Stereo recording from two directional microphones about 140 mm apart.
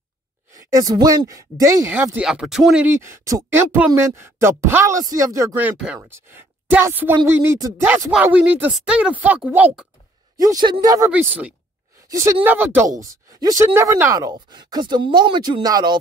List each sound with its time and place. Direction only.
0.6 s speech: 25° right (ahead or behind)
2.1 s speech: 5° right (ahead or behind)
2.9 s a woman's voice: 20° right (ahead or behind)
10.3 s speech: 25° right (ahead or behind)
11.1 s speech: 10° right (ahead or behind)
12.1 s speech: 20° right (ahead or behind)